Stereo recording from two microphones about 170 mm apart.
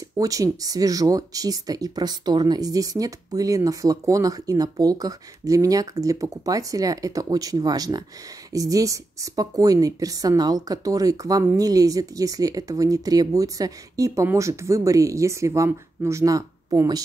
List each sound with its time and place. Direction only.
0.2 s speech: 20° right (ahead or behind)